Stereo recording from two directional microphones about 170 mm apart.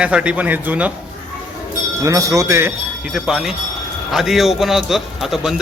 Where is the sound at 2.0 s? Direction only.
20° right (ahead or behind).